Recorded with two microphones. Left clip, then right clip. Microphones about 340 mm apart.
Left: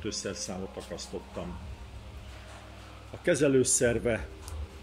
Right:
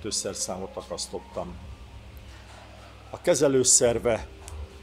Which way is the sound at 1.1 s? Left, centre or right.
Right.